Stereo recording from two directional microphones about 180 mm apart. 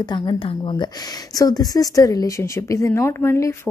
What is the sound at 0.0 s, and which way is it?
Speech, 25° left (ahead or behind).